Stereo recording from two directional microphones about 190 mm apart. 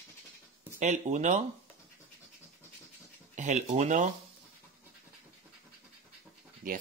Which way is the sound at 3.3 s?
40° right (ahead or behind).